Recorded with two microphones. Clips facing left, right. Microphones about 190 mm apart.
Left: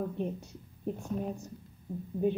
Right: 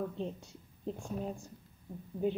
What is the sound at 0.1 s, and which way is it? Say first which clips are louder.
A woman's voice: left 4 dB; 15° left (ahead or behind).